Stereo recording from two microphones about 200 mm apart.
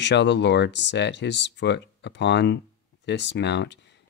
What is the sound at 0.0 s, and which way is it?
Speech, 60° left (ahead or behind).